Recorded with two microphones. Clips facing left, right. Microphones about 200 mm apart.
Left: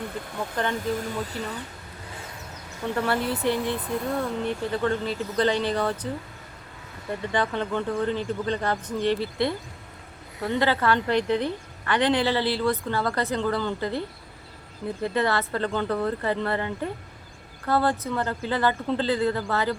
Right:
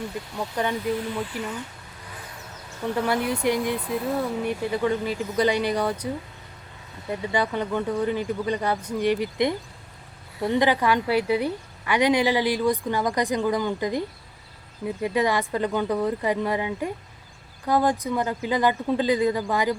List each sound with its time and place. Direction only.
0.3 s a woman's voice: 15° right (ahead or behind)
0.9 s speech: 40° left (ahead or behind)
2.8 s a woman's voice: 10° right (ahead or behind)